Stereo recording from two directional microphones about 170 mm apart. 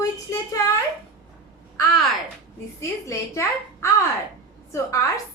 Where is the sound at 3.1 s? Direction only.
15° left (ahead or behind).